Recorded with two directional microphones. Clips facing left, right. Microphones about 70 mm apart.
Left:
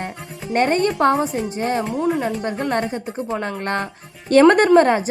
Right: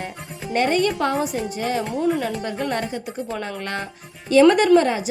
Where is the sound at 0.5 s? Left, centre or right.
Left.